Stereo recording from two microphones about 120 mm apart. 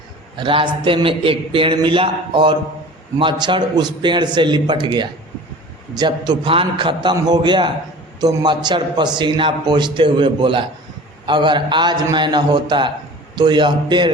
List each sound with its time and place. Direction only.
0.3 s a man's voice: 45° right (ahead or behind)